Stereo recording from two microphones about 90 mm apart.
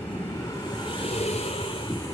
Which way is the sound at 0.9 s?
75° left (ahead or behind).